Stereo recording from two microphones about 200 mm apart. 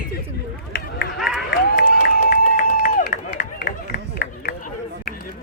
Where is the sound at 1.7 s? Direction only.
50° left (ahead or behind).